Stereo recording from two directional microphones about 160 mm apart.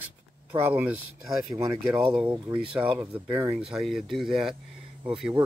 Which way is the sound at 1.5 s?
30° right (ahead or behind).